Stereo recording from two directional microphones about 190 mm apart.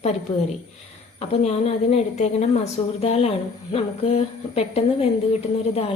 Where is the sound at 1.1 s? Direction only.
35° left (ahead or behind).